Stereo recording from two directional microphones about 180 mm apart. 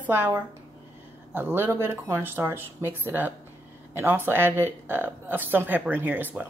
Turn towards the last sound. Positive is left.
turn(degrees=-10)  # may be behind; listen again after turning